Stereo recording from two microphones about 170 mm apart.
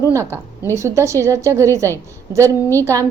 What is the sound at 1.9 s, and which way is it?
Speech, 15° left (ahead or behind).